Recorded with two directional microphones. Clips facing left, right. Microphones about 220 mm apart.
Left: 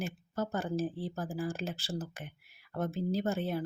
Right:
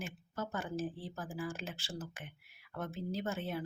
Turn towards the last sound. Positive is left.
turn(degrees=35)  # may be behind; listen again after turning